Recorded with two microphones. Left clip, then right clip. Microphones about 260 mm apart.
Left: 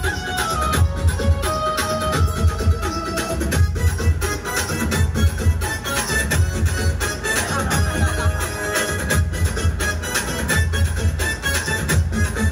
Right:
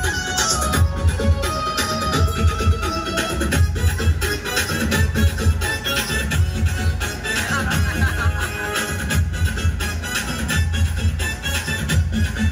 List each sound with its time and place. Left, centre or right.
0.0 s music: centre
5.9 s music: centre